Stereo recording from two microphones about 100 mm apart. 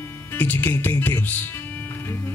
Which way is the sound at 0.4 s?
20° left (ahead or behind).